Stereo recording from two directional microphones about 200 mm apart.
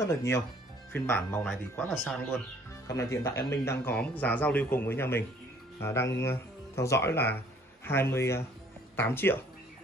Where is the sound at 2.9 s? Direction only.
15° left (ahead or behind).